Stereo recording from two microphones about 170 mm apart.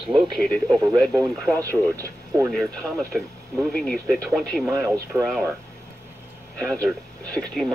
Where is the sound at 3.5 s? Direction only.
5° left (ahead or behind).